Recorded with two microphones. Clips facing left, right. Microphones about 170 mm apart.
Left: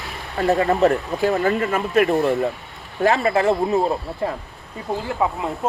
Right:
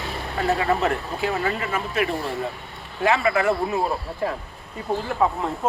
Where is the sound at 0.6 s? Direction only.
40° left (ahead or behind).